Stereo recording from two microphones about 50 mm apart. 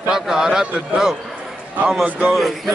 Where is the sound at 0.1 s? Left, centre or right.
Centre.